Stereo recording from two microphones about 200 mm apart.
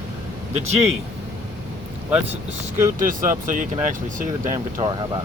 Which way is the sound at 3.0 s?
40° right (ahead or behind).